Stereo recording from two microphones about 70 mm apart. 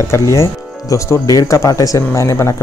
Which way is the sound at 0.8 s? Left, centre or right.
Left.